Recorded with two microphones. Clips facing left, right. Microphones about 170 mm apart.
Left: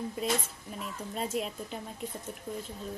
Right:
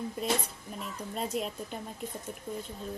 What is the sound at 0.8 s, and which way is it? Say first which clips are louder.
Speech: even; centre (ahead or behind).